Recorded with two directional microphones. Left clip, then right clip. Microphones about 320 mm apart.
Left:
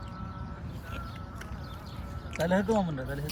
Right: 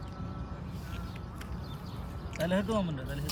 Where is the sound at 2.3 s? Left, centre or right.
Centre.